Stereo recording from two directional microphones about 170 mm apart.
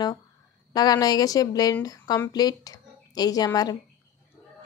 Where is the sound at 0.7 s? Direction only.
25° left (ahead or behind).